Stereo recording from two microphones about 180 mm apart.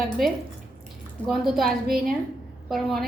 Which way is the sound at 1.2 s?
Centre (ahead or behind).